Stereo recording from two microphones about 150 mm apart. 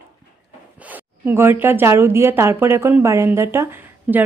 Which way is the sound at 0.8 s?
10° right (ahead or behind).